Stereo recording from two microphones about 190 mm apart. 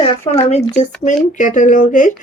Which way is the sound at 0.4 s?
35° left (ahead or behind).